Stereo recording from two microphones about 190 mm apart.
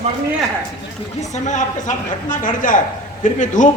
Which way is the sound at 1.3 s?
40° left (ahead or behind).